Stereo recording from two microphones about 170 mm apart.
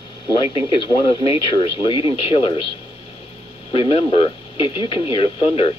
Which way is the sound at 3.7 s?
35° left (ahead or behind).